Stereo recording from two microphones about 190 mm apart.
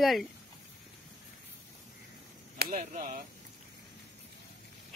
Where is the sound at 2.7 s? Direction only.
40° right (ahead or behind).